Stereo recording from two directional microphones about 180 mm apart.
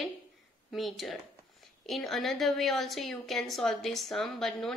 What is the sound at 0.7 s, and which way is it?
A woman's voice, centre (ahead or behind).